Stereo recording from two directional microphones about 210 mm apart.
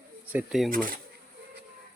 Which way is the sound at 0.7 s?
40° right (ahead or behind).